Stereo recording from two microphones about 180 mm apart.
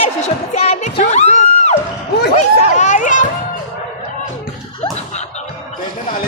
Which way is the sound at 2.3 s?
40° left (ahead or behind).